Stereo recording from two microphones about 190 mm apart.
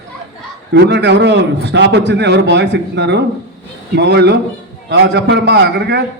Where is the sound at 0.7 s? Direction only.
65° right (ahead or behind).